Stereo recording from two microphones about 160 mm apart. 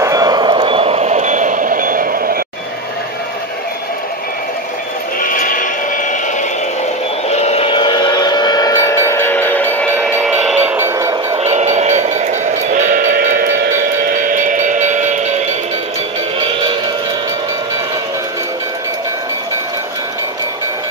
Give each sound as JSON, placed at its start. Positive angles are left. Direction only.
{"t": 0.0, "sound": "reversing beeps", "side_deg": -20}
{"t": 5.2, "sound": "music", "side_deg": 60}
{"t": 7.2, "sound": "train", "side_deg": 40}
{"t": 10.1, "sound": "a sound", "side_deg": -5}
{"t": 11.3, "sound": "train", "side_deg": -45}